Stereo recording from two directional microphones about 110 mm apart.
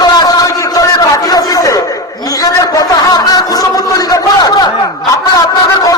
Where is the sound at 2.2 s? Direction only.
35° left (ahead or behind).